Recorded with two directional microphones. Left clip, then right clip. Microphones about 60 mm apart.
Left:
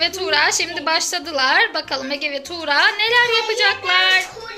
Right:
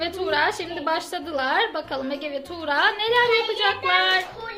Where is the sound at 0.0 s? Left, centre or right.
Right.